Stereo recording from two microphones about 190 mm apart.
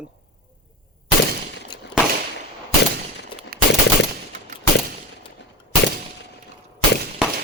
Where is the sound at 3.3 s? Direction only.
25° left (ahead or behind).